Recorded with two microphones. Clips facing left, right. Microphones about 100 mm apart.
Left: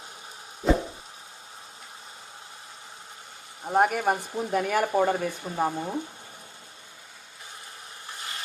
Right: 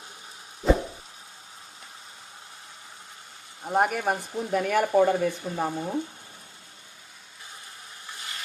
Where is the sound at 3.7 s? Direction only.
Centre (ahead or behind).